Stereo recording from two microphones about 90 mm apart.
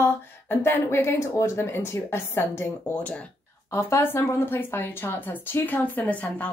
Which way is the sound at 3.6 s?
30° left (ahead or behind).